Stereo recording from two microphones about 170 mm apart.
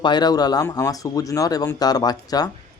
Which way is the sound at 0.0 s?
25° left (ahead or behind).